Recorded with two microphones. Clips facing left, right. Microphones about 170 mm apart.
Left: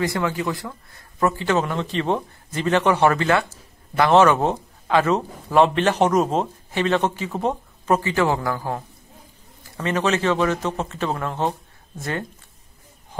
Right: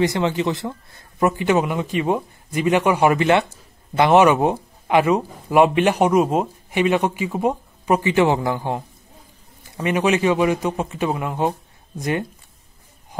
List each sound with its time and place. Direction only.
0.0 s speech: 20° right (ahead or behind)